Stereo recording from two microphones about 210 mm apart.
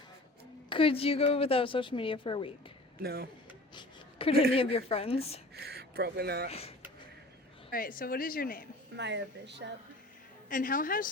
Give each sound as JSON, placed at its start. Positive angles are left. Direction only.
{"t": 0.7, "sound": "a woman's voice", "side_deg": 25}
{"t": 3.0, "sound": "speech", "side_deg": -50}
{"t": 3.8, "sound": "a sound", "side_deg": 25}
{"t": 4.5, "sound": "a woman's voice", "side_deg": 25}
{"t": 5.5, "sound": "speech", "side_deg": -50}
{"t": 6.5, "sound": "a woman's voice", "side_deg": 30}
{"t": 7.7, "sound": "a woman's voice", "side_deg": 45}
{"t": 9.0, "sound": "speech", "side_deg": -55}
{"t": 10.5, "sound": "a woman's voice", "side_deg": 40}